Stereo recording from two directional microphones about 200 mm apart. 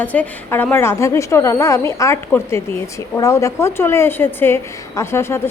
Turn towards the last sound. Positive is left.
turn(degrees=15)  # may be behind; listen again after turning